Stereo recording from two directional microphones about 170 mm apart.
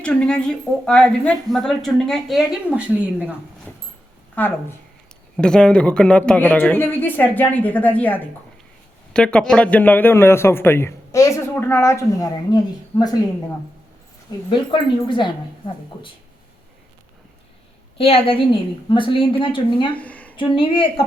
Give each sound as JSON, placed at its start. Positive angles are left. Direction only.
{"t": 0.0, "sound": "speech", "side_deg": 5}
{"t": 4.4, "sound": "a man's voice", "side_deg": 10}
{"t": 14.3, "sound": "speech", "side_deg": 25}
{"t": 17.9, "sound": "speech", "side_deg": 35}
{"t": 20.0, "sound": "a sound", "side_deg": 10}
{"t": 20.3, "sound": "speech", "side_deg": 30}